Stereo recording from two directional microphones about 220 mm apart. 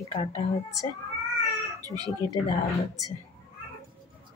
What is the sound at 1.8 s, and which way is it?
Speech, 15° right (ahead or behind).